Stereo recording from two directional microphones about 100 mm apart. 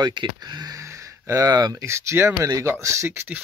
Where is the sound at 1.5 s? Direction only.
45° right (ahead or behind).